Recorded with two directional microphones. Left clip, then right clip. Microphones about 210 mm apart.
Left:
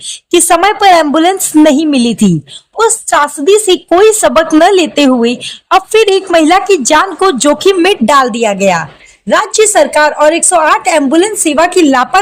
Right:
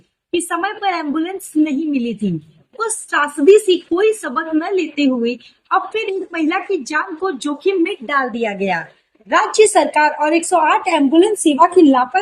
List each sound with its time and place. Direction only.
0.3 s a woman's voice: 65° left (ahead or behind)
9.3 s speech: 45° left (ahead or behind)